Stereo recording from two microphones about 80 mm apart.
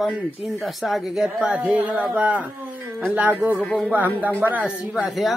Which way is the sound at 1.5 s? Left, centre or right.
Centre.